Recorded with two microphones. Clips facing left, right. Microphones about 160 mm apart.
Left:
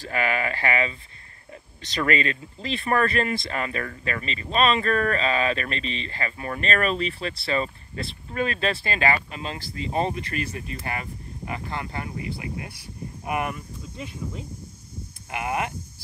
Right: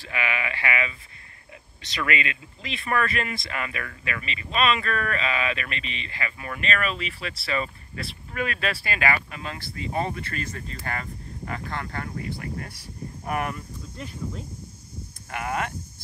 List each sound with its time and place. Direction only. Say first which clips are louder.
0.0 s speech: left 4 dB; 40° left (ahead or behind); by 14.4 s 5° left (ahead or behind)
15.2 s speech: left 1 dB; 15° left (ahead or behind)